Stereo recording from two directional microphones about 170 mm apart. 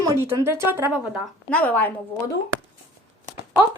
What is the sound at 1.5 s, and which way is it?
Speech, 10° left (ahead or behind).